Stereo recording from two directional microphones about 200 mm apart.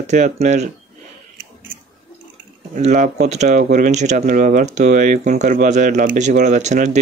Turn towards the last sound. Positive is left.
turn(degrees=-35)  # may be behind; listen again after turning